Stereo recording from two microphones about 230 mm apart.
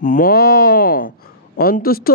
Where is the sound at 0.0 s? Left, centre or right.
Left.